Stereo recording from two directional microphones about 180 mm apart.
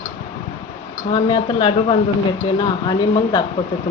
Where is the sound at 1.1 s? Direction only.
25° left (ahead or behind).